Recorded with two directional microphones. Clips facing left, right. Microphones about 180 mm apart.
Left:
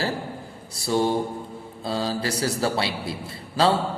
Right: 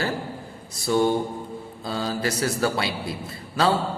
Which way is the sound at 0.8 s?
30° left (ahead or behind).